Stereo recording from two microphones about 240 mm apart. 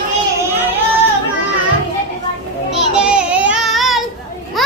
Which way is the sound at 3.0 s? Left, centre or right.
Centre.